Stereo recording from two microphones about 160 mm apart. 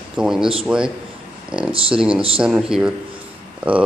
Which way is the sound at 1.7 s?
35° right (ahead or behind).